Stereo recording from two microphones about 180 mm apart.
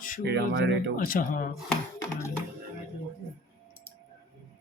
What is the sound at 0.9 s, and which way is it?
Speech, 50° left (ahead or behind).